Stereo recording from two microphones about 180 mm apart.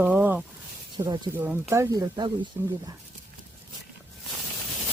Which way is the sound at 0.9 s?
25° right (ahead or behind).